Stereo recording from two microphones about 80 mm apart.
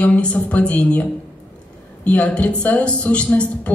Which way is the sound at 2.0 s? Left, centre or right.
Centre.